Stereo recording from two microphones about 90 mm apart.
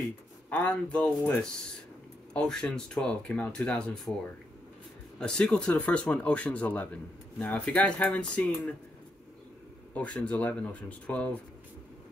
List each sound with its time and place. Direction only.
0.5 s speech: 10° left (ahead or behind)
5.2 s speech: 10° left (ahead or behind)
9.9 s speech: 10° left (ahead or behind)